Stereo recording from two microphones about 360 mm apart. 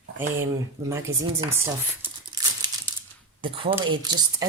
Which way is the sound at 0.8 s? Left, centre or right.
Centre.